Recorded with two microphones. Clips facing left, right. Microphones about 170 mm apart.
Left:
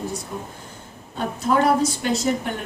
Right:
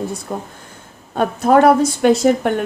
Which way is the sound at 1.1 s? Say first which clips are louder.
Right 8 dB; 60° right (ahead or behind).